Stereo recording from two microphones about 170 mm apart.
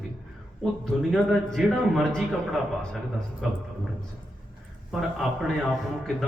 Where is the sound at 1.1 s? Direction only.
Centre (ahead or behind).